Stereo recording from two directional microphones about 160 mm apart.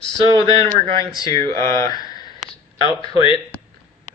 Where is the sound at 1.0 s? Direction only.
20° left (ahead or behind).